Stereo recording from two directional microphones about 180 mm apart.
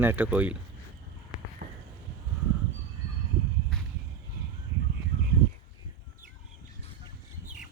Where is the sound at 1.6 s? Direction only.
60° right (ahead or behind).